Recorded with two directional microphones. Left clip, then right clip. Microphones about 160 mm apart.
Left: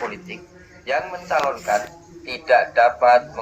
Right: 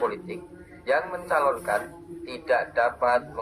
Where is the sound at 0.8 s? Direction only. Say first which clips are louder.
Left 1 dB; 20° left (ahead or behind).